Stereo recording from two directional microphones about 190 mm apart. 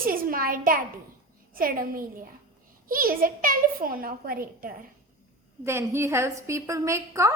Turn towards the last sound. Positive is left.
turn(degrees=-15)  # may be behind; listen again after turning